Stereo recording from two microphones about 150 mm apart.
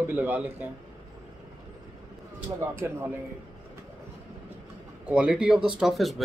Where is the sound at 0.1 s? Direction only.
10° right (ahead or behind).